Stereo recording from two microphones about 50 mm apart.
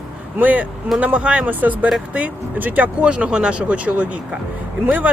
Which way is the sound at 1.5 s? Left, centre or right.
Right.